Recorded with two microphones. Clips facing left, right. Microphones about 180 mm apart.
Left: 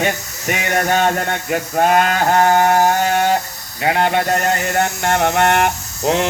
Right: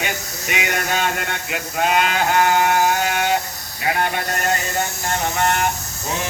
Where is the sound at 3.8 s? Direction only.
60° left (ahead or behind).